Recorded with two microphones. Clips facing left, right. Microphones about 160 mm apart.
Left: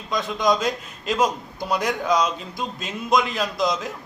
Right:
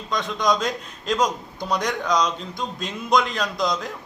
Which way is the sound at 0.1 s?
5° left (ahead or behind).